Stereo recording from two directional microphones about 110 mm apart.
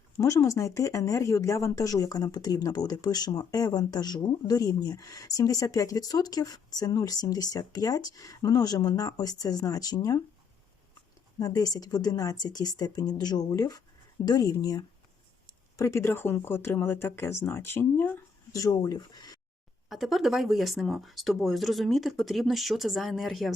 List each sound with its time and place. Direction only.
0.2 s speech: 30° left (ahead or behind)
11.3 s speech: 35° left (ahead or behind); by 18.2 s 15° left (ahead or behind)
18.5 s speech: 35° left (ahead or behind)
19.9 s speech: centre (ahead or behind)